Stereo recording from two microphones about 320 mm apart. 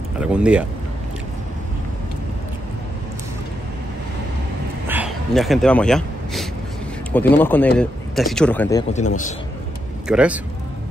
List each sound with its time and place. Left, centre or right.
0.2 s speech: centre
4.8 s a sound: centre
7.1 s speech: centre
8.9 s a man's voice: left
10.0 s speech: centre